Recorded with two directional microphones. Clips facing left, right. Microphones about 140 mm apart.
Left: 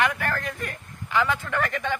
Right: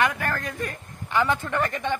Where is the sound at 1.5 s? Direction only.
20° right (ahead or behind).